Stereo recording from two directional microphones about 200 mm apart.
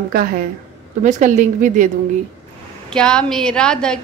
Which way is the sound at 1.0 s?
35° right (ahead or behind).